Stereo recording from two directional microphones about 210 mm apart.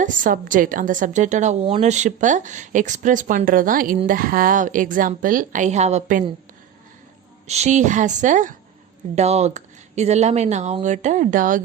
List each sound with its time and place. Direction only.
0.0 s a woman's voice: 40° right (ahead or behind)
7.4 s a woman's voice: 30° right (ahead or behind)